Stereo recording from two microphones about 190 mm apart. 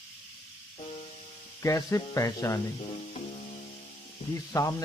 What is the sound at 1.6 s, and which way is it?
Speech, 15° left (ahead or behind).